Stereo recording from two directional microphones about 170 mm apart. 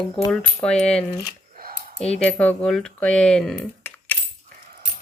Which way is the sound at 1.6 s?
60° right (ahead or behind).